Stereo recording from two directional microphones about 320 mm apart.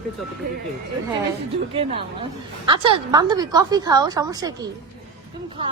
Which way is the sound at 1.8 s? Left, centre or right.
Centre.